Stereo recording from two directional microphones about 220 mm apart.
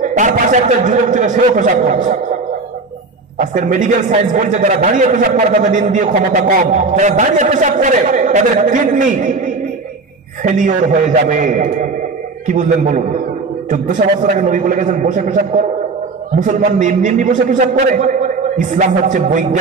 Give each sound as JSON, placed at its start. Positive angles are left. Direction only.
{"t": 0.0, "sound": "a man's voice", "side_deg": -35}
{"t": 3.3, "sound": "a man's voice", "side_deg": -35}
{"t": 10.4, "sound": "a man's voice", "side_deg": -35}